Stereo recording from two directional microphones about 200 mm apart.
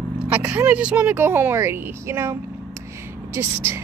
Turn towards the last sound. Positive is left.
turn(degrees=-10)  # may be behind; listen again after turning